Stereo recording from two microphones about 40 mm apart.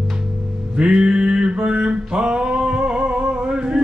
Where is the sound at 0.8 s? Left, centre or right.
Right.